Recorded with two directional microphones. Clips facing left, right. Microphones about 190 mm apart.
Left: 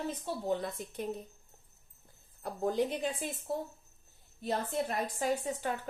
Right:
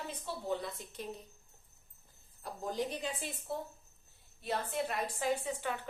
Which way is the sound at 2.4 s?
55° left (ahead or behind).